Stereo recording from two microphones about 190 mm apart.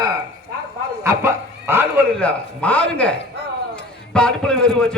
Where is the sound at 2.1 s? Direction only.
5° left (ahead or behind).